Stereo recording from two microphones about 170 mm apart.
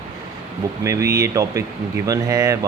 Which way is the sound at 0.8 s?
20° right (ahead or behind).